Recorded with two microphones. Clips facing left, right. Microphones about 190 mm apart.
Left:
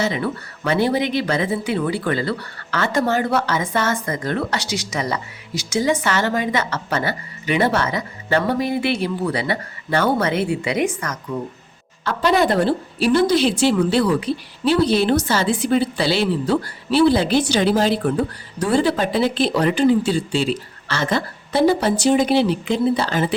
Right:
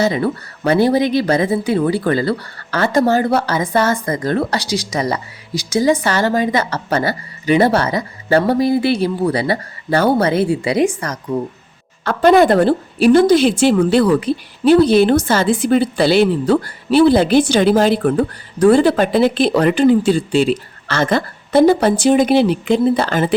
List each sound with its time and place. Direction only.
0.0 s speech: 40° right (ahead or behind)
12.0 s a woman's voice: 50° right (ahead or behind)